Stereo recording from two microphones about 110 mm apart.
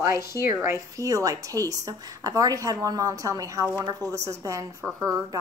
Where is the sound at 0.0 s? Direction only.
25° right (ahead or behind).